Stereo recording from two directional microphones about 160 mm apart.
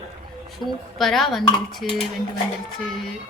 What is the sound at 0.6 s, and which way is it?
Speech, 25° right (ahead or behind).